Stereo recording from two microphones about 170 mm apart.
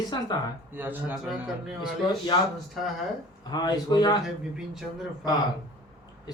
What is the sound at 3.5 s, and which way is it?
Speech, 25° left (ahead or behind).